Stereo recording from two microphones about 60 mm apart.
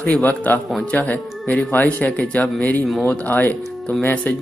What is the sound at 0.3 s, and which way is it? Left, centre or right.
A man's voice, left.